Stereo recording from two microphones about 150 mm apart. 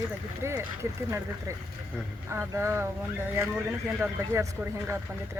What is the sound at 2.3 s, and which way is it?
Speech, 15° right (ahead or behind).